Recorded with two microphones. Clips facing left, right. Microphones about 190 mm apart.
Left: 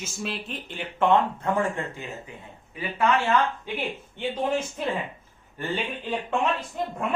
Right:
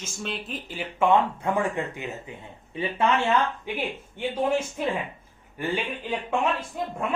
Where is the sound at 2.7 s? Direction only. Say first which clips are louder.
Right 2 dB; 25° right (ahead or behind).